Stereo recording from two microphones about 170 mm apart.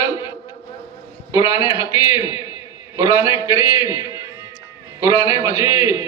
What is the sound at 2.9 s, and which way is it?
A man's voice, 15° right (ahead or behind).